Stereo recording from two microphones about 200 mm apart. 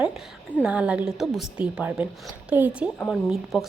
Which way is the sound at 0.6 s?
5° right (ahead or behind).